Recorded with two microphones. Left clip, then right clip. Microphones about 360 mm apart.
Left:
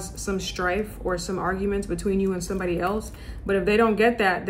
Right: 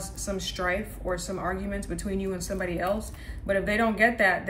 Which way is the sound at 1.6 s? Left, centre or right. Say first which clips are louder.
Left 8 dB; centre.